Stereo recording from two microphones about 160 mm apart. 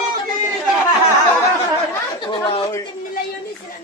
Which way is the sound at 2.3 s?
30° left (ahead or behind).